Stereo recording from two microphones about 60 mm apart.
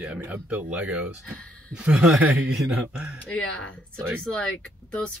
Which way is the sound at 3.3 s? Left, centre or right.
Centre.